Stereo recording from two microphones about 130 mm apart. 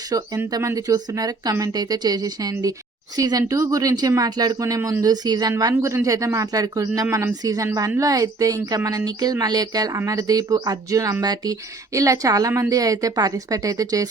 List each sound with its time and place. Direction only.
0.1 s speech: 30° right (ahead or behind)